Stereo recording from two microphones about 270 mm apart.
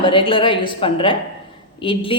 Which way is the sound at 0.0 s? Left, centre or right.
Centre.